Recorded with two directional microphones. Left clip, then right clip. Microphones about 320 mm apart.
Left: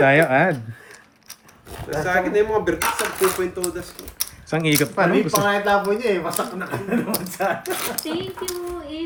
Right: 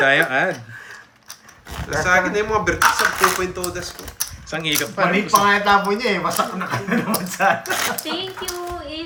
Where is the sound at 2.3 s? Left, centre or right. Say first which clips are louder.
Even; right.